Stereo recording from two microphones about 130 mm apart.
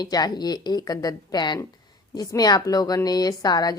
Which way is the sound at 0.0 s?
30° left (ahead or behind).